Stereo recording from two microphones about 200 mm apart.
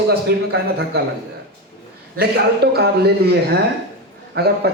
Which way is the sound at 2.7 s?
55° right (ahead or behind).